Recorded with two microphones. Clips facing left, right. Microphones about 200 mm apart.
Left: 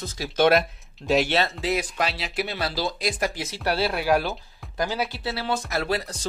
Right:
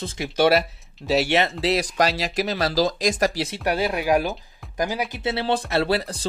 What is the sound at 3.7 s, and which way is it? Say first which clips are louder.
Speech: right 1 dB; 15° right (ahead or behind).